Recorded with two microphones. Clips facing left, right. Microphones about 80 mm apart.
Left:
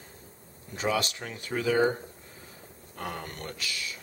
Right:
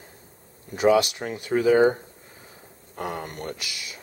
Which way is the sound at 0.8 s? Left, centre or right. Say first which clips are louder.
Right 10 dB; centre.